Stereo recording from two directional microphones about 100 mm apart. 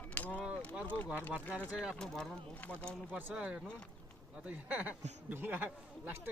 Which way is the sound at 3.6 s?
10° left (ahead or behind).